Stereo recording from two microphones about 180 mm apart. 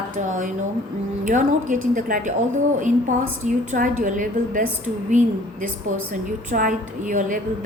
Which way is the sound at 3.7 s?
45° right (ahead or behind).